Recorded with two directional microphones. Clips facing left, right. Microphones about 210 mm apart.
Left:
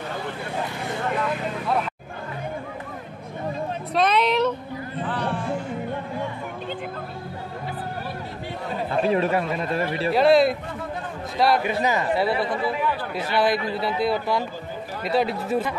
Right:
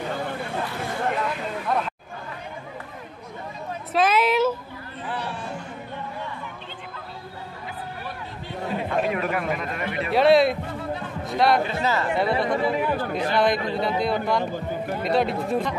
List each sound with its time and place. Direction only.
3.9 s a sound: 5° right (ahead or behind)
9.0 s speech: 30° left (ahead or behind)
10.1 s a man's voice: centre (ahead or behind)
11.6 s speech: 15° left (ahead or behind)
12.2 s a man's voice: 5° left (ahead or behind)
12.4 s speech: 45° right (ahead or behind)
13.3 s a man's voice: 5° left (ahead or behind)